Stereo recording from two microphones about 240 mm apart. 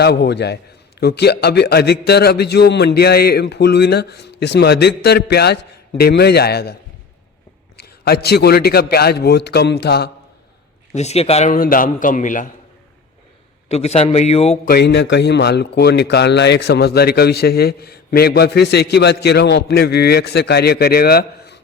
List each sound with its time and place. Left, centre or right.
0.0 s a man's voice: left
7.8 s a man's voice: left
10.9 s a man's voice: left
13.7 s a man's voice: left
14.7 s a man's voice: left